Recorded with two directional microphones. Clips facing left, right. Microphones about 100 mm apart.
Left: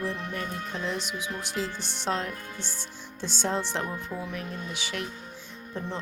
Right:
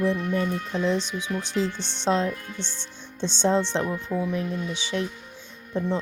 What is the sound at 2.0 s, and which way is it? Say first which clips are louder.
Speech: right 7 dB; 30° right (ahead or behind).